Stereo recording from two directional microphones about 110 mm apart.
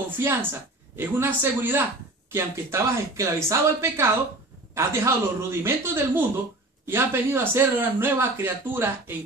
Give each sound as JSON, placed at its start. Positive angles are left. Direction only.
{"t": 0.2, "sound": "speech", "side_deg": -20}